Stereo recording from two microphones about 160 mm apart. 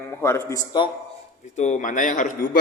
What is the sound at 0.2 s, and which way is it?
Speech, 15° left (ahead or behind).